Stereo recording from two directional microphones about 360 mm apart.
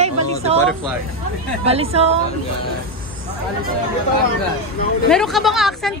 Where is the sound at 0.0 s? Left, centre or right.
Centre.